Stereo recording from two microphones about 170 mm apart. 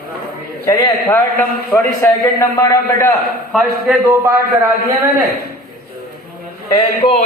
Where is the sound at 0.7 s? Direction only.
20° left (ahead or behind).